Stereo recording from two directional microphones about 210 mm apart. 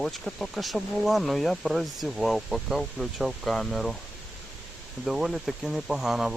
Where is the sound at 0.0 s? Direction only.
Centre (ahead or behind).